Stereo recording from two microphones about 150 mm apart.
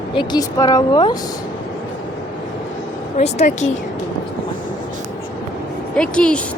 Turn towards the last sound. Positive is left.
turn(degrees=5)  # may be behind; listen again after turning